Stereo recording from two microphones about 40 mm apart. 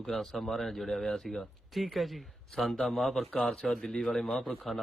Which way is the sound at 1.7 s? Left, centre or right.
Centre.